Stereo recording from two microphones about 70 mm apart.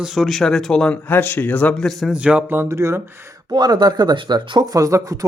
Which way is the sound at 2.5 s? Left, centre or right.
Right.